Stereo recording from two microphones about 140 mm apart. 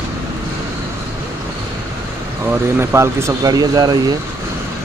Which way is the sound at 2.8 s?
20° right (ahead or behind).